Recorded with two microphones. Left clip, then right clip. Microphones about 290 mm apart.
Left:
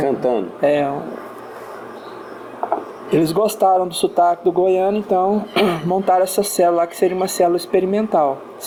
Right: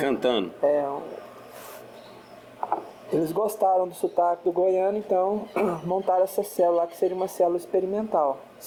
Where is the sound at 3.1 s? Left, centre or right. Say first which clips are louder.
Left 8 dB; left.